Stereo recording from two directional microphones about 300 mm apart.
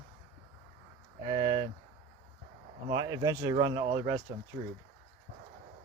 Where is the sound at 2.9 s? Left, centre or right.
Centre.